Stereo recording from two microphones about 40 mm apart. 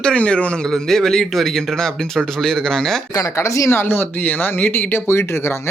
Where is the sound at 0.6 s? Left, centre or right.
Centre.